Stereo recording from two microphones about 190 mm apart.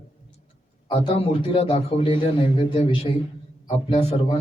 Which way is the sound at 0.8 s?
30° left (ahead or behind).